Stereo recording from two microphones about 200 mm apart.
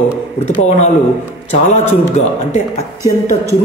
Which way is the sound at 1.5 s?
35° left (ahead or behind).